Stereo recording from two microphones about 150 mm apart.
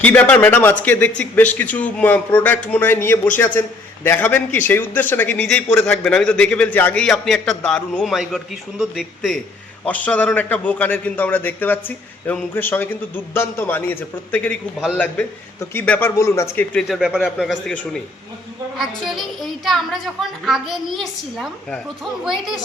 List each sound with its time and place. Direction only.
0.0 s a man's voice: 10° left (ahead or behind)
9.8 s a man's voice: 10° left (ahead or behind)
16.7 s a woman's voice: 5° right (ahead or behind)
18.8 s a woman's voice: centre (ahead or behind)